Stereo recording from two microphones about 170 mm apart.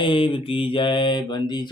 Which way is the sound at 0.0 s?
30° left (ahead or behind).